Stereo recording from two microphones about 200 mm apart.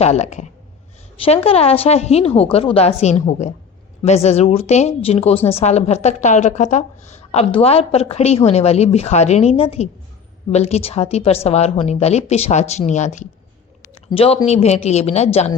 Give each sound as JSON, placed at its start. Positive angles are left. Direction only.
{"t": 0.0, "sound": "a woman's voice", "side_deg": 35}